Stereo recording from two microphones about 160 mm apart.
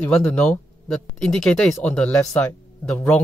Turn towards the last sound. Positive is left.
turn(degrees=10)  # may be behind; listen again after turning